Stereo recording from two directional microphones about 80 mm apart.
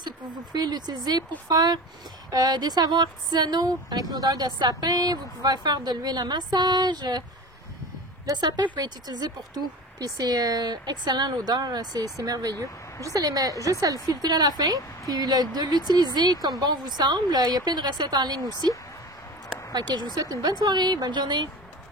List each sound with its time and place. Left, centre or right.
0.0 s speech: right
8.3 s a woman's voice: right
20.2 s speech: right